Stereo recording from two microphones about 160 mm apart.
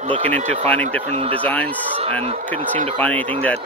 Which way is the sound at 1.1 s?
35° right (ahead or behind).